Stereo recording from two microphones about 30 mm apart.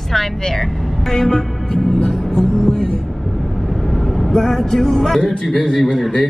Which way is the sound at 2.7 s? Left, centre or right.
Left.